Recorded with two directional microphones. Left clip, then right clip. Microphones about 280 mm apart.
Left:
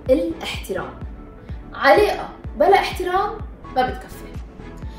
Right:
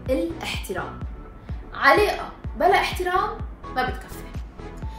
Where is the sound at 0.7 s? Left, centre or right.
Centre.